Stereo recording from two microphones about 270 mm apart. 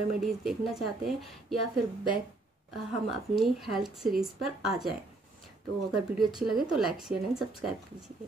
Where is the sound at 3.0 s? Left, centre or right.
Centre.